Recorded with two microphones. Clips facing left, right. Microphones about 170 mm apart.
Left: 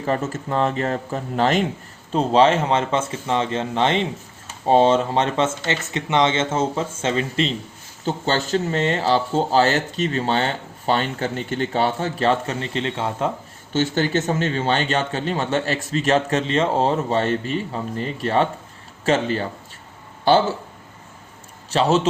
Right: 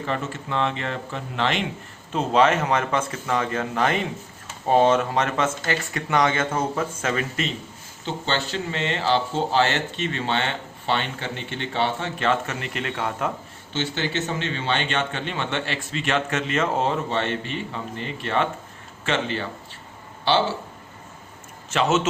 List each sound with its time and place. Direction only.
0.0 s speech: 40° left (ahead or behind)
2.1 s speech: 30° left (ahead or behind)
8.0 s speech: 45° left (ahead or behind); by 13.3 s 25° left (ahead or behind)
13.7 s speech: 45° left (ahead or behind)
21.7 s speech: 35° left (ahead or behind)